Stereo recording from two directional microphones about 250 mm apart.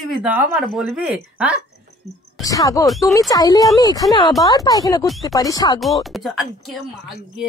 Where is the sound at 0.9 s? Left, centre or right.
Centre.